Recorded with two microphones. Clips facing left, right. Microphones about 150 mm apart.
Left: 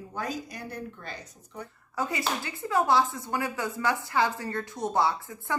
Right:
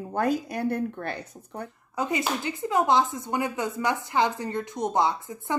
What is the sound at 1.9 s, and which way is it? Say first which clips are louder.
Speech: right 3 dB; 20° right (ahead or behind).